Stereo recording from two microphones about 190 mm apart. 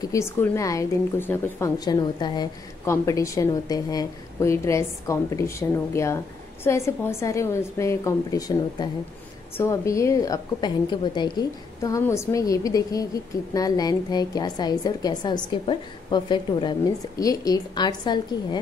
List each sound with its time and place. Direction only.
0.0 s a woman's voice: 15° left (ahead or behind)